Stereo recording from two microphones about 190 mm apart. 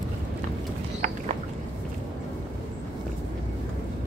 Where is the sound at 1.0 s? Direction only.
40° right (ahead or behind).